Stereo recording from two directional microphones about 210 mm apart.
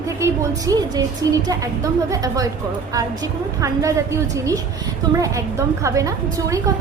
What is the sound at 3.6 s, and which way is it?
Speech, 15° right (ahead or behind).